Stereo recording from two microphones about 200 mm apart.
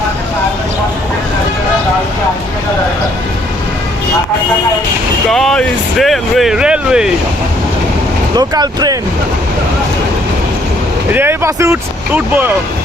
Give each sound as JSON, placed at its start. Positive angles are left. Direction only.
{"t": 5.3, "sound": "speech", "side_deg": 0}
{"t": 8.4, "sound": "speech", "side_deg": -20}
{"t": 11.1, "sound": "speech", "side_deg": -10}